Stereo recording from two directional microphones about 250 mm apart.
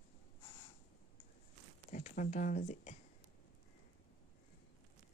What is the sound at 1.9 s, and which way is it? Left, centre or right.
Speech, left.